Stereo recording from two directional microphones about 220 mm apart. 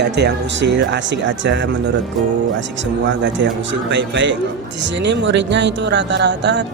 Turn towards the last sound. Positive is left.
turn(degrees=-50)  # may be behind; listen again after turning